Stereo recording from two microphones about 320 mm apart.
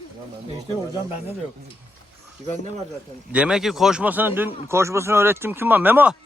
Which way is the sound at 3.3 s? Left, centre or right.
Centre.